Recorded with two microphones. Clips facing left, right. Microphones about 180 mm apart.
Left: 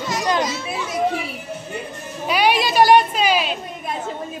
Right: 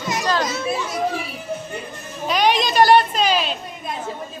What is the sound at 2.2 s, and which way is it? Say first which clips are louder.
A woman's voice: even; 10° left (ahead or behind).